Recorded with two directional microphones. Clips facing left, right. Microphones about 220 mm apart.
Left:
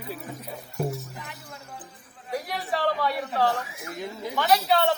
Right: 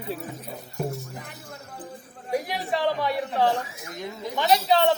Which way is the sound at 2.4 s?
25° right (ahead or behind).